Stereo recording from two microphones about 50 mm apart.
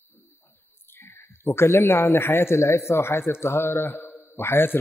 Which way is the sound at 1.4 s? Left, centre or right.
Left.